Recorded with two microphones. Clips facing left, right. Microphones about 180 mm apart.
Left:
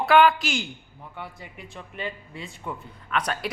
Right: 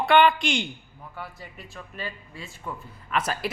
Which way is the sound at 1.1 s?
20° left (ahead or behind).